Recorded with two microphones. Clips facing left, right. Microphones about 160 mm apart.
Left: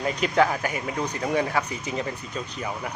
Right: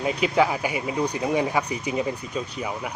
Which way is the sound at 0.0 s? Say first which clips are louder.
Right 1 dB; 10° right (ahead or behind).